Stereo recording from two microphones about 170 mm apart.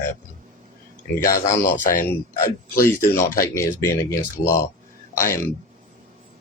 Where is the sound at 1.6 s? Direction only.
50° left (ahead or behind).